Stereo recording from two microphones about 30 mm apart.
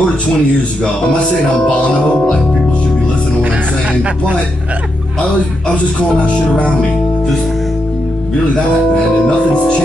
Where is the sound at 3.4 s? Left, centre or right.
Right.